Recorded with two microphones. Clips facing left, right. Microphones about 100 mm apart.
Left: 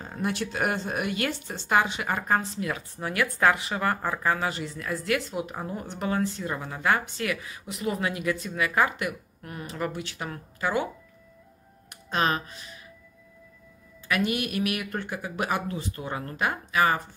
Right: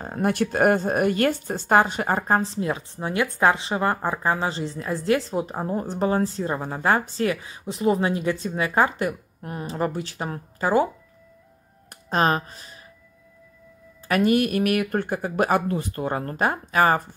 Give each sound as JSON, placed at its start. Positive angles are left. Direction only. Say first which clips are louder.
{"t": 0.0, "sound": "speech", "louder": "right 7 dB", "side_deg": -50}
{"t": 11.9, "sound": "speech", "louder": "right 5 dB", "side_deg": -40}
{"t": 14.0, "sound": "speech", "louder": "right 7 dB", "side_deg": -40}